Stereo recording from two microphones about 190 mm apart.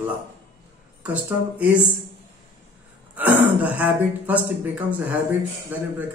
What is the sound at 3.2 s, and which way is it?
A man's voice, 10° right (ahead or behind).